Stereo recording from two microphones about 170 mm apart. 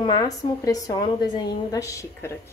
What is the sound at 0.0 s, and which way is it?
A woman's voice, 25° left (ahead or behind).